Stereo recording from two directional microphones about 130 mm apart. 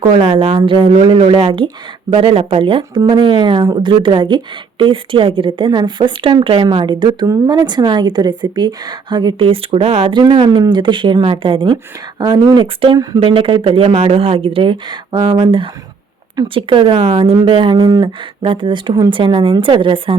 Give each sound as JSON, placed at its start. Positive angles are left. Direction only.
{"t": 0.2, "sound": "speech", "side_deg": -45}